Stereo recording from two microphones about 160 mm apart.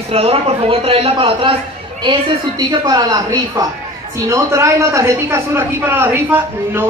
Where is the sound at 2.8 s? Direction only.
25° right (ahead or behind).